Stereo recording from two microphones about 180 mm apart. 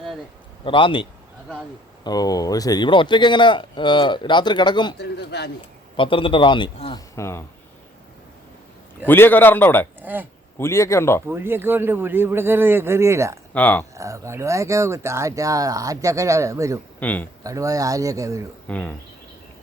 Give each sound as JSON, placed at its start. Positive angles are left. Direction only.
{"t": 0.6, "sound": "speech", "side_deg": 30}
{"t": 2.0, "sound": "speech", "side_deg": 20}
{"t": 4.9, "sound": "a man's voice", "side_deg": 65}
{"t": 6.0, "sound": "speech", "side_deg": 30}
{"t": 7.2, "sound": "a man's voice", "side_deg": 15}
{"t": 9.0, "sound": "a man's voice", "side_deg": 10}
{"t": 10.0, "sound": "speech", "side_deg": -10}
{"t": 10.6, "sound": "a man's voice", "side_deg": 15}
{"t": 11.3, "sound": "speech", "side_deg": -10}
{"t": 13.5, "sound": "a man's voice", "side_deg": 10}
{"t": 13.9, "sound": "speech", "side_deg": -15}
{"t": 17.0, "sound": "speech", "side_deg": 10}
{"t": 17.4, "sound": "speech", "side_deg": -20}
{"t": 18.7, "sound": "a man's voice", "side_deg": 10}